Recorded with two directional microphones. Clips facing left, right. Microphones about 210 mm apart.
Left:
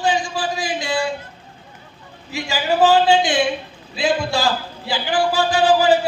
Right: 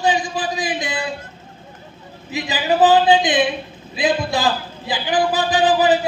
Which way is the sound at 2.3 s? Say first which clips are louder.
Right 1 dB; 20° right (ahead or behind).